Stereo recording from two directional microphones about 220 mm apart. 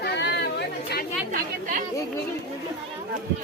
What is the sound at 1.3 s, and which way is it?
Chatter, 40° right (ahead or behind).